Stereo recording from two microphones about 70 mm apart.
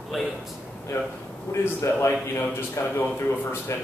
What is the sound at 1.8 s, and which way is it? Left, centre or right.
A man's voice, left.